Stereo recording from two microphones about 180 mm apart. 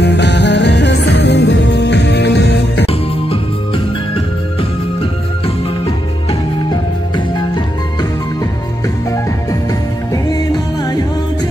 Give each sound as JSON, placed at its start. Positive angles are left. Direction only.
{"t": 0.0, "sound": "music", "side_deg": 75}
{"t": 2.9, "sound": "music", "side_deg": 30}
{"t": 6.7, "sound": "music", "side_deg": 25}